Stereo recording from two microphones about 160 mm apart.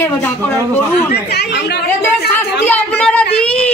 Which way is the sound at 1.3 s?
90° left.